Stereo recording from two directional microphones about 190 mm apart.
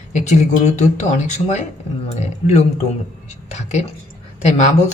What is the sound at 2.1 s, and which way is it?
Speech, 35° left (ahead or behind).